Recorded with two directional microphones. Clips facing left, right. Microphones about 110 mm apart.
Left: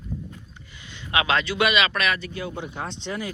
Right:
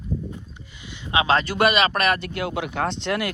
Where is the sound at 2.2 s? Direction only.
75° right (ahead or behind).